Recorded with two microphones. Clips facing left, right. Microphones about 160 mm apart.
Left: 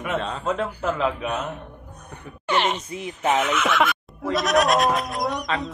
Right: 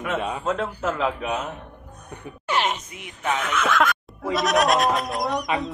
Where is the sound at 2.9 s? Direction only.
30° left (ahead or behind).